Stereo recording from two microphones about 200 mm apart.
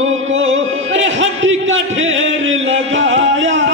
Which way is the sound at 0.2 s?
75° right (ahead or behind).